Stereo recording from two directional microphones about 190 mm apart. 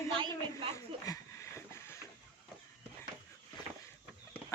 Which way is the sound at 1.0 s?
15° left (ahead or behind).